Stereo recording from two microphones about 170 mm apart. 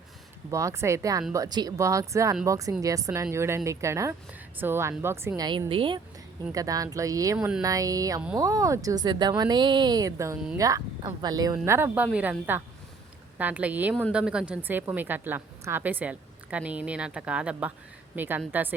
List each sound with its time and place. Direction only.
0.5 s a woman's voice: 15° right (ahead or behind)
5.5 s speech: 30° right (ahead or behind)
6.5 s speech: 20° right (ahead or behind)
7.3 s speech: 5° right (ahead or behind)
7.6 s a woman's voice: 20° right (ahead or behind)